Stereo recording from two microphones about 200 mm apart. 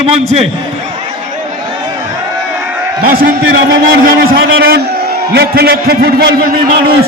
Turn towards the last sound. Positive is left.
turn(degrees=-50)  # may be behind; listen again after turning